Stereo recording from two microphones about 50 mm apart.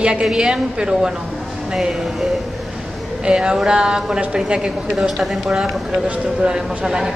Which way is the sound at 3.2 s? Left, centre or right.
Centre.